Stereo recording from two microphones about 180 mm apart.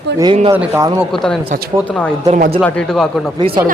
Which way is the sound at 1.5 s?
60° right (ahead or behind).